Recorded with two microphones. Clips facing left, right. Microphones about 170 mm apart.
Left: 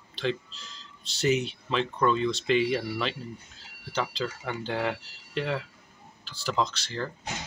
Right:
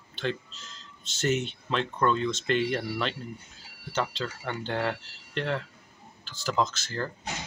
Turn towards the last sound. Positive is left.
turn(degrees=0)  # may be behind; listen again after turning